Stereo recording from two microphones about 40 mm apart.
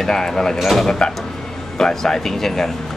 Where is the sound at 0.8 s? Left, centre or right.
Centre.